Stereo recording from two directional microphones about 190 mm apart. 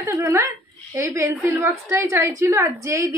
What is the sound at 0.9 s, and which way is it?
A woman's voice, 15° right (ahead or behind).